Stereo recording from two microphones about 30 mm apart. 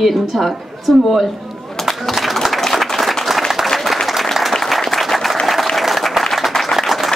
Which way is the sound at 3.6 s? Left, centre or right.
Centre.